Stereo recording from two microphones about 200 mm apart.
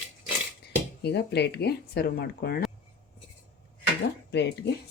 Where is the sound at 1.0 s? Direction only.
55° left (ahead or behind).